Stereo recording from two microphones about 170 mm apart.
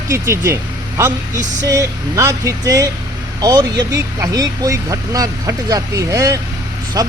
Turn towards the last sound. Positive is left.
turn(degrees=-20)  # may be behind; listen again after turning